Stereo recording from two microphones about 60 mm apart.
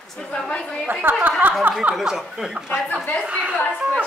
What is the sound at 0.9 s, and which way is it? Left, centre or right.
Speech, right.